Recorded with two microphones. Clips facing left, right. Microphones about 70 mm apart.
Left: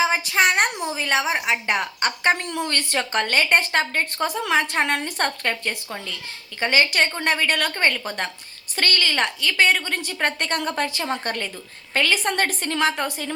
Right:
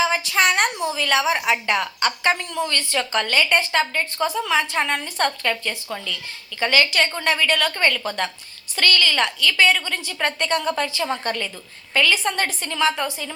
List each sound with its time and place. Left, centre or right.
0.3 s a woman's voice: centre
0.9 s a woman's voice: left
1.8 s a woman's voice: left
2.4 s a woman's voice: left
5.2 s a woman's voice: left
7.2 s a woman's voice: left
7.7 s a woman's voice: left
11.0 s a woman's voice: left